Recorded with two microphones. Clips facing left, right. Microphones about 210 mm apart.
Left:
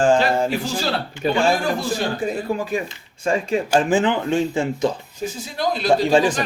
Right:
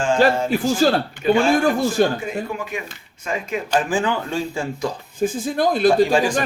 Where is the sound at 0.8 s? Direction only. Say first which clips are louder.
Right 10 dB; 45° right (ahead or behind).